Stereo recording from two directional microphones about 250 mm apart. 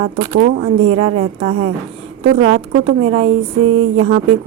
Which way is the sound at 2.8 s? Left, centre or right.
Right.